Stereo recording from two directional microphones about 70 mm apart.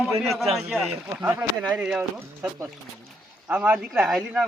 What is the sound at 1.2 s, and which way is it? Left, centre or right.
Speech, right.